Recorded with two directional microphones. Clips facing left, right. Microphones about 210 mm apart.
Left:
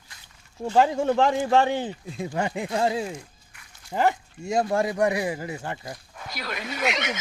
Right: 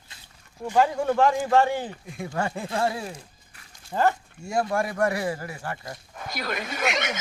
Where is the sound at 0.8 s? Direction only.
25° left (ahead or behind).